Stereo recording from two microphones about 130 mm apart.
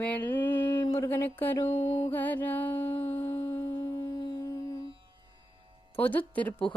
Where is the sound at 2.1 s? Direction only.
15° left (ahead or behind).